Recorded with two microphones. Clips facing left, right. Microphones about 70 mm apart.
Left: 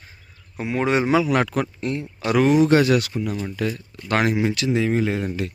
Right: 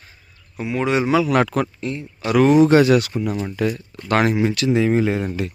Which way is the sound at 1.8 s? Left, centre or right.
Left.